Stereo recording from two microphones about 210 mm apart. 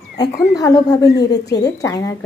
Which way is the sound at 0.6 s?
15° left (ahead or behind).